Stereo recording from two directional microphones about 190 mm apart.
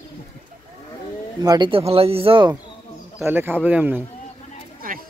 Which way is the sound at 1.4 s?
20° right (ahead or behind).